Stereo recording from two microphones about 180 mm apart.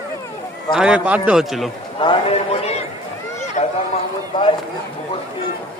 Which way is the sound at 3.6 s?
40° left (ahead or behind).